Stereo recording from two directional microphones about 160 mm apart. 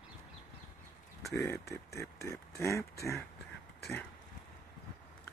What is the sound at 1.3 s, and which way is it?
Speech, 15° left (ahead or behind).